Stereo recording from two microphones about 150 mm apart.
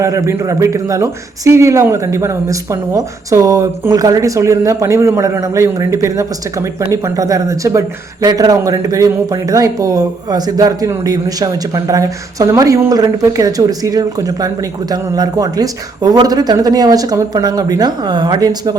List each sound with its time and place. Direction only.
0.0 s speech: 20° right (ahead or behind)